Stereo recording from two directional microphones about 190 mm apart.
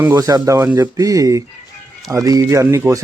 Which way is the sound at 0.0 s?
15° right (ahead or behind).